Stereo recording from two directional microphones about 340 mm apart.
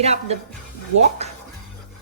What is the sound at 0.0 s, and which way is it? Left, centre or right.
Speech, centre.